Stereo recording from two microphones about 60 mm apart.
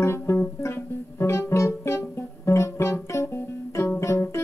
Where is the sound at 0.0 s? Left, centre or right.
Left.